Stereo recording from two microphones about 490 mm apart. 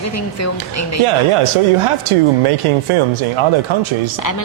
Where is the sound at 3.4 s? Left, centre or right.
Right.